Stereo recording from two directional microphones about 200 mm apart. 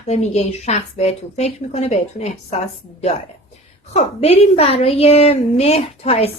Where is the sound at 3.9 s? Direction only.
30° left (ahead or behind).